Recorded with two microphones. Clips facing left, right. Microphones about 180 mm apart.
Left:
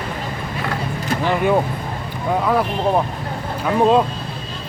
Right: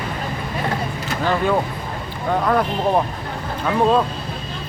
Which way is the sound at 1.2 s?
15° left (ahead or behind).